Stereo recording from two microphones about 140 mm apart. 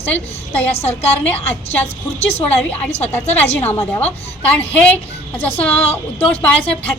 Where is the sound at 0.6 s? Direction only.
45° left (ahead or behind).